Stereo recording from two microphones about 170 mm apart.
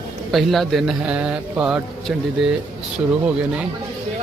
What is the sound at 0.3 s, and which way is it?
A man's voice, centre (ahead or behind).